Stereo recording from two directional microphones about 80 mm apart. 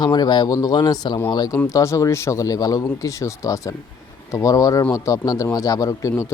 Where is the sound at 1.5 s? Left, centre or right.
Left.